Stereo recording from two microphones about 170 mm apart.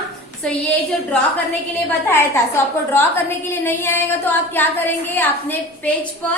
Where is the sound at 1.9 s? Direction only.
10° left (ahead or behind).